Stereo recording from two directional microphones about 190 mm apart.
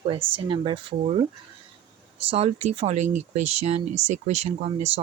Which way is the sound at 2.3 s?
30° right (ahead or behind).